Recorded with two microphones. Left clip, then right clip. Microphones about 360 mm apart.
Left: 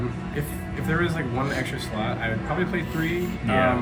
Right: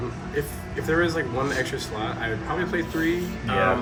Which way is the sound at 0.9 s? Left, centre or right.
Centre.